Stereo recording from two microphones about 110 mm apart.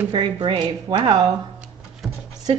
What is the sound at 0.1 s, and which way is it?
Speech, 45° right (ahead or behind).